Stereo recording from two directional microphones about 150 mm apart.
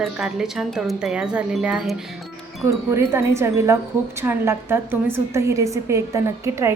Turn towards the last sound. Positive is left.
turn(degrees=-20)  # may be behind; listen again after turning